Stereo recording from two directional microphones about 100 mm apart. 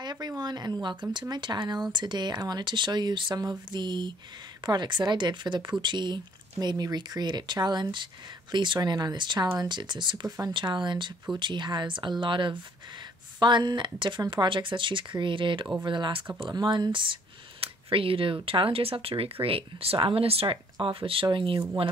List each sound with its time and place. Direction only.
0.0 s a sound: 45° right (ahead or behind)
0.4 s speech: 45° right (ahead or behind)
17.6 s speech: 65° right (ahead or behind)